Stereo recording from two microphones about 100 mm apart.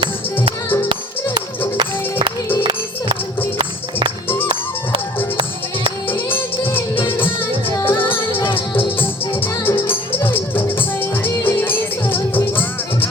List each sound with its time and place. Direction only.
1.8 s music: 55° right (ahead or behind)
6.1 s music: 20° left (ahead or behind)